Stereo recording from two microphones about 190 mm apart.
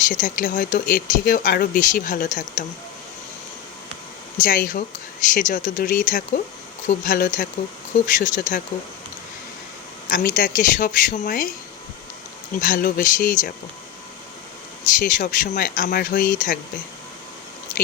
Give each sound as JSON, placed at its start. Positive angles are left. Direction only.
{"t": 0.1, "sound": "speech", "side_deg": 45}
{"t": 4.4, "sound": "speech", "side_deg": 45}
{"t": 10.1, "sound": "speech", "side_deg": 45}
{"t": 12.5, "sound": "speech", "side_deg": 45}
{"t": 14.8, "sound": "speech", "side_deg": 45}